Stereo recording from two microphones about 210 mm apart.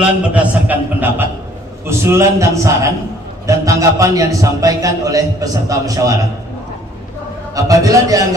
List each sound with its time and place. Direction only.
0.0 s a man's voice: 5° right (ahead or behind)
7.5 s a man's voice: 15° right (ahead or behind)